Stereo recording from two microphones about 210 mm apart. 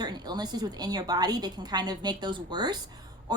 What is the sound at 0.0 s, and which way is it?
A woman's voice, 20° right (ahead or behind).